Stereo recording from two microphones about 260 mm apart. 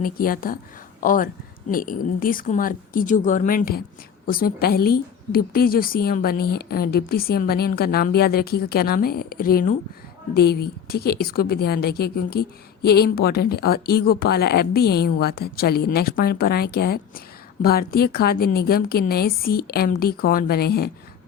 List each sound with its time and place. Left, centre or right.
0.0 s a woman's voice: left